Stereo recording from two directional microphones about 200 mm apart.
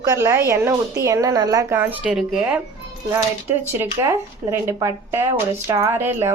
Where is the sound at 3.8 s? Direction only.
15° right (ahead or behind).